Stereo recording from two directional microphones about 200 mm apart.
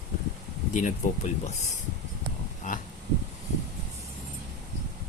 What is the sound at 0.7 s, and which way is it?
Speech, 40° left (ahead or behind).